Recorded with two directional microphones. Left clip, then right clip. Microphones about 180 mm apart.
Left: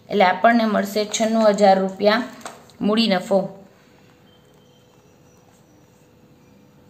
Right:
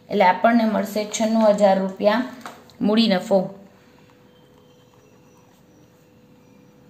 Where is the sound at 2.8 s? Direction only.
Centre (ahead or behind).